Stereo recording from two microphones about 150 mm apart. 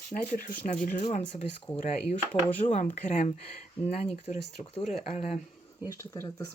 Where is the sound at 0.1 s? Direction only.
65° left (ahead or behind); by 4.4 s 50° left (ahead or behind).